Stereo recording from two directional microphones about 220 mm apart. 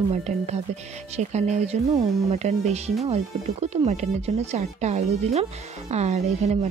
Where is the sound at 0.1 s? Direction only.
30° right (ahead or behind).